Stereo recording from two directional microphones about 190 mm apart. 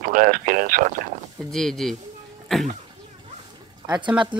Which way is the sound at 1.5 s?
Centre (ahead or behind).